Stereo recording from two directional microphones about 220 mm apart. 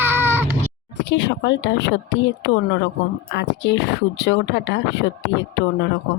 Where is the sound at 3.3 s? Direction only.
50° left (ahead or behind).